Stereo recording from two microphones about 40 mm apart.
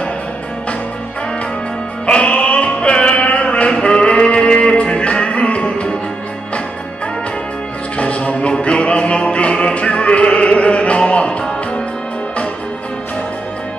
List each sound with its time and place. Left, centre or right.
2.0 s music: left
8.0 s music: left